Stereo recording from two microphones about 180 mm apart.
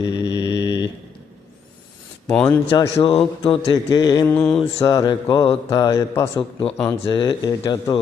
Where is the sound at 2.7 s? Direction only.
30° left (ahead or behind).